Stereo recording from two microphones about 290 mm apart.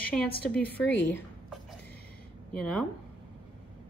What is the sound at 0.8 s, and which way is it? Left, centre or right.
Speech, left.